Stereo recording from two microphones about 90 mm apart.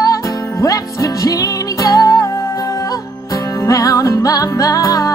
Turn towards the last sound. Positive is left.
turn(degrees=40)  # may be behind; listen again after turning